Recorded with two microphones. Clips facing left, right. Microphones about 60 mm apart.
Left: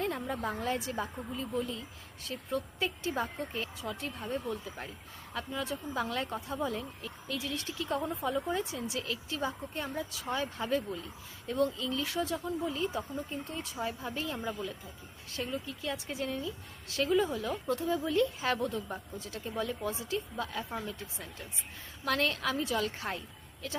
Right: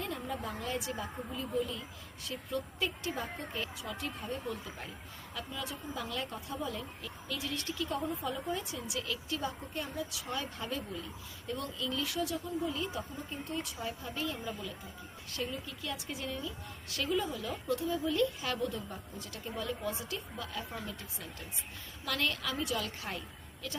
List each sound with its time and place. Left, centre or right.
0.0 s a woman's voice: left
2.7 s speech: left
3.2 s speech: left
14.0 s speech: left
17.3 s speech: left
20.7 s speech: left
22.0 s speech: left